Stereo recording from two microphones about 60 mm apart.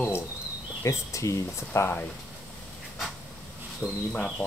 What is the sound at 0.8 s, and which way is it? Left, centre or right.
Speech, left.